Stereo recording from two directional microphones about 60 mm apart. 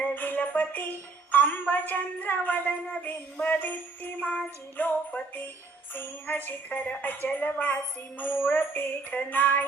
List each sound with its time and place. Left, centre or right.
0.0 s a woman's voice: left
3.0 s jingle bell: left
4.8 s music: left
7.3 s jingle bell: left
8.2 s music: left